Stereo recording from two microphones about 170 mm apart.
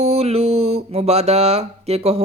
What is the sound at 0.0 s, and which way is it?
Mantra, 40° right (ahead or behind).